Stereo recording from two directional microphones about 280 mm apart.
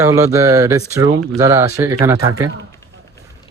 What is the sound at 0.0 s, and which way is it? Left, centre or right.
Speech, centre.